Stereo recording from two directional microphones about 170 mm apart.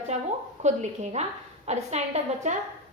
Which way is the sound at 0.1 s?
40° right (ahead or behind).